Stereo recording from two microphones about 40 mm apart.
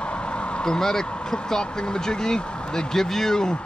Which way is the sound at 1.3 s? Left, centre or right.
Centre.